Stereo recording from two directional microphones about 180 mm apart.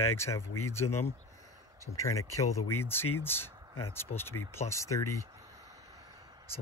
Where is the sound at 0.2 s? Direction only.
15° left (ahead or behind).